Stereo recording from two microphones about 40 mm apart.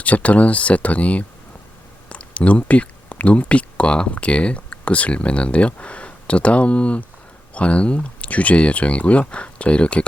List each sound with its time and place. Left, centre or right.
0.0 s speech: left